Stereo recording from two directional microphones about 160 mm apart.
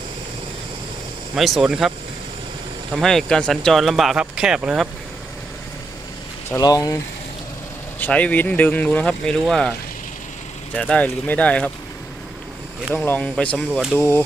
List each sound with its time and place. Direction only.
1.4 s speech: centre (ahead or behind)
2.9 s speech: centre (ahead or behind)
6.5 s speech: 20° left (ahead or behind)
7.9 s speech: 10° left (ahead or behind)
10.8 s speech: 5° left (ahead or behind)
12.9 s speech: 10° left (ahead or behind)
14.0 s speech: 15° left (ahead or behind)